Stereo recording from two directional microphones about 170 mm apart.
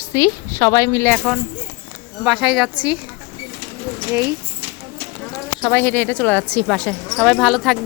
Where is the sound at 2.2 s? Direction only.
Centre (ahead or behind).